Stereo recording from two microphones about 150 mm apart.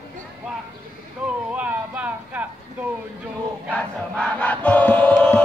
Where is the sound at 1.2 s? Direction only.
10° right (ahead or behind).